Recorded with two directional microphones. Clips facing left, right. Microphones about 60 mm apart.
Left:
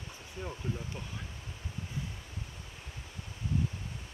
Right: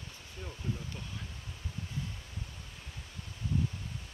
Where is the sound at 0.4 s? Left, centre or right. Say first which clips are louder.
Left 2 dB; centre.